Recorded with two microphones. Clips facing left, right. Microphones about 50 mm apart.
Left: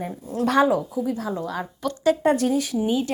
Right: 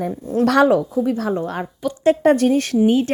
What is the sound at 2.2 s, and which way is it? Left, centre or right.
Speech, right.